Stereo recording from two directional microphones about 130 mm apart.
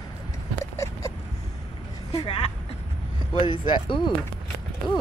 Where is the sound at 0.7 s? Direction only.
25° left (ahead or behind).